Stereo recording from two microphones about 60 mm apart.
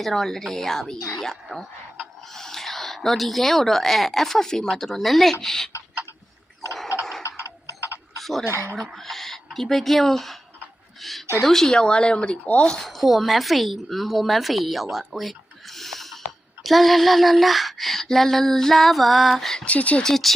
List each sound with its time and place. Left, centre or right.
0.0 s female singing: centre
0.9 s speech: left
1.2 s speech: centre
7.2 s a sound: left
8.2 s speech: centre
8.4 s speech: right
9.0 s speech: centre
11.0 s female singing: centre
11.4 s speech: centre
12.8 s speech: centre
16.6 s female singing: centre
19.6 s speech: left
20.0 s speech: centre